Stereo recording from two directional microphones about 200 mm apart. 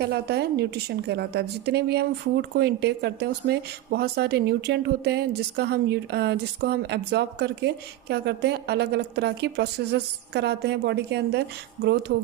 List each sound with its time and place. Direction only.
0.0 s a woman's voice: 55° right (ahead or behind)